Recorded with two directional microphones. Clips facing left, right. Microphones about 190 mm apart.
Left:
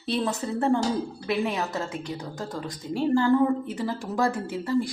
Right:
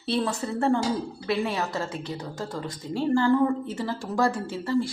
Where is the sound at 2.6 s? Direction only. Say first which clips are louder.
Left 1 dB; 10° left (ahead or behind).